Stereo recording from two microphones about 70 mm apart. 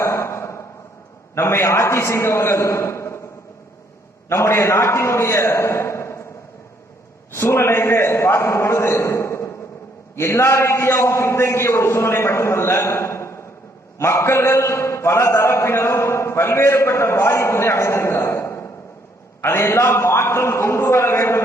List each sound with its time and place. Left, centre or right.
0.0 s a sound: left
1.4 s a man's voice: left
4.3 s a man's voice: left
7.3 s a man's voice: left